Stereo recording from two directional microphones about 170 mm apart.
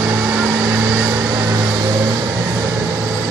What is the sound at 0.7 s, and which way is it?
Vehicle, 20° right (ahead or behind).